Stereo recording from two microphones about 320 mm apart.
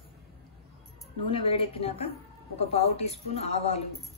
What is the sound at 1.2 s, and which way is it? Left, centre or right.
A woman's voice, centre.